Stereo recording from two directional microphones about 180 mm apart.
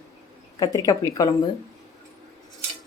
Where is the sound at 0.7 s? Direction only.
20° left (ahead or behind).